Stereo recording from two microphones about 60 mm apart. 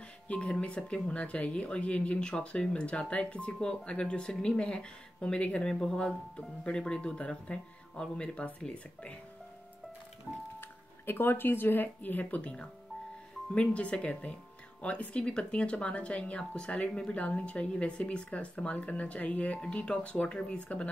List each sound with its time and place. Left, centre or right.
0.3 s speech: centre
10.6 s speech: left
12.4 s speech: centre